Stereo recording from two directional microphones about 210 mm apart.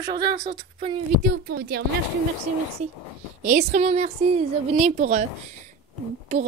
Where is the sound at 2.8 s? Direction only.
35° right (ahead or behind).